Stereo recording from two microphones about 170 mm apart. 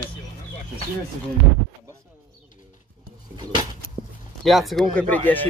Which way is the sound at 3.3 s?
25° right (ahead or behind).